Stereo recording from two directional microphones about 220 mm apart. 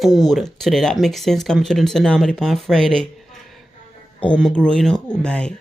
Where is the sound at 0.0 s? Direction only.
Centre (ahead or behind).